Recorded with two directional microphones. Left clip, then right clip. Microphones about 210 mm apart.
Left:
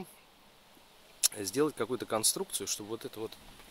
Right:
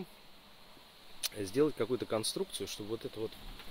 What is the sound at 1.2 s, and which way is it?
Speech, 10° left (ahead or behind).